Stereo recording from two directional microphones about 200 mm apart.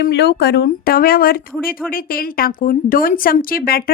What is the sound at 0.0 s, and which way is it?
A woman's voice, 55° left (ahead or behind).